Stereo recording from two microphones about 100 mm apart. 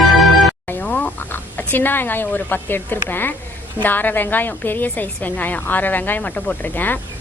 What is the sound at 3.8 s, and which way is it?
Speech, 20° left (ahead or behind).